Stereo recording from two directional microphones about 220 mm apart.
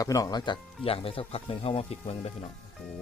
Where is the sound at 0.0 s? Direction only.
15° left (ahead or behind).